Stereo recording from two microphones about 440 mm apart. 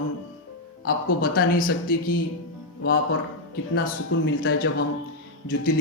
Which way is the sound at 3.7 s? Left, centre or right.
Left.